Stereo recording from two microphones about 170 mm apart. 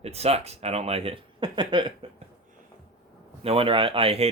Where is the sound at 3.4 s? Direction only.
30° right (ahead or behind).